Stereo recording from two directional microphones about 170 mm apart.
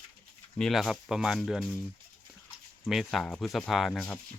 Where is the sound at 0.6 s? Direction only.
Centre (ahead or behind).